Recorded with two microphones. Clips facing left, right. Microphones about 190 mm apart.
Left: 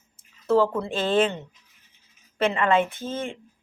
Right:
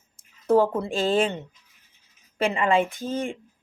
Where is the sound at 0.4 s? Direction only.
15° right (ahead or behind).